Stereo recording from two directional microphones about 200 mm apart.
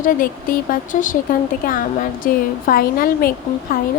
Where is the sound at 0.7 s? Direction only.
40° left (ahead or behind).